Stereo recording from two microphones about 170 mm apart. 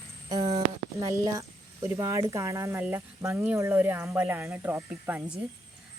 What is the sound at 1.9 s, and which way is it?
Speech, 15° right (ahead or behind).